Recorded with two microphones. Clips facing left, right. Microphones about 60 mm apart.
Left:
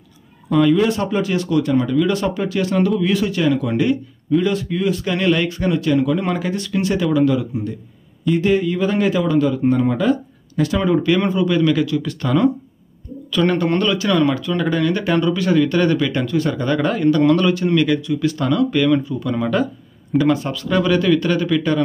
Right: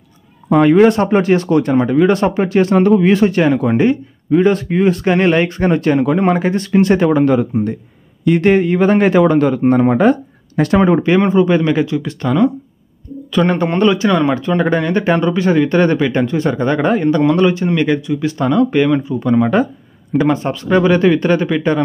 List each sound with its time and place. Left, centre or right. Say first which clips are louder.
0.5 s speech: right 6 dB; right
11.0 s speech: right 5 dB; right
13.3 s speech: right 2 dB; right